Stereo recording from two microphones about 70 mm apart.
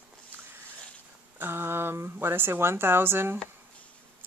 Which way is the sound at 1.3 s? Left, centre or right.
Right.